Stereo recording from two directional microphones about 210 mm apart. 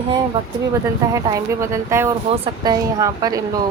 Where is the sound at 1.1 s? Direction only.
15° right (ahead or behind).